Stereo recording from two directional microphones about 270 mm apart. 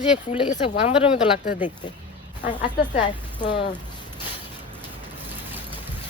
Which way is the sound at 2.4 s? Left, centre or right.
Centre.